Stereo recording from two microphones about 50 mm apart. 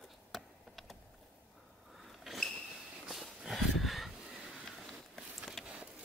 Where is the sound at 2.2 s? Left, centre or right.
Centre.